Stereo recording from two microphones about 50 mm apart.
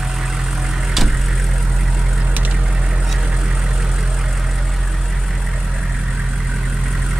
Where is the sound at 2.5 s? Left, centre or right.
Centre.